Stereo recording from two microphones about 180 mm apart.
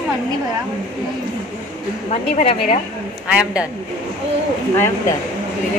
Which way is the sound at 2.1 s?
35° left (ahead or behind).